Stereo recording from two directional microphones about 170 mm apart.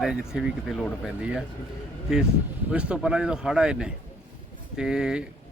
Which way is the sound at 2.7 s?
5° right (ahead or behind).